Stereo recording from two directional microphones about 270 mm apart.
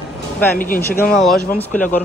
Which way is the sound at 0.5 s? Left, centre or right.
Left.